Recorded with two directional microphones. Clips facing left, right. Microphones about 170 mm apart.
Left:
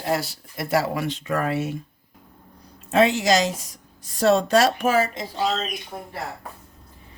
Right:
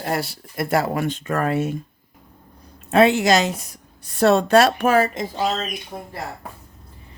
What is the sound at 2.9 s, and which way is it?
A woman's voice, 60° right (ahead or behind).